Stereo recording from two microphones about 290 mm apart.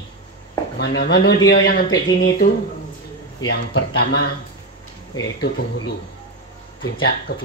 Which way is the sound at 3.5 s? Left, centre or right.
Left.